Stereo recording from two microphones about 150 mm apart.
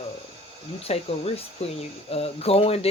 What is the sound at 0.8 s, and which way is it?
Speech, 40° left (ahead or behind).